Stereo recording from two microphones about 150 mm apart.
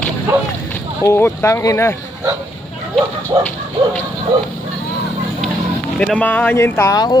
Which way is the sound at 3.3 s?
35° right (ahead or behind).